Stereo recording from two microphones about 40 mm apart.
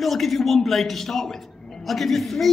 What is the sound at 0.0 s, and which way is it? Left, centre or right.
A man's voice, centre.